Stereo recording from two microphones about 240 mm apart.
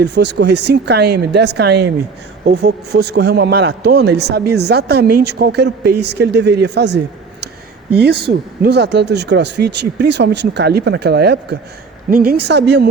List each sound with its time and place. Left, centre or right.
0.0 s a man's voice: right